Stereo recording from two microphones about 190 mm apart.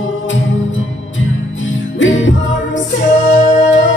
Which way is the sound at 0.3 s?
80° left.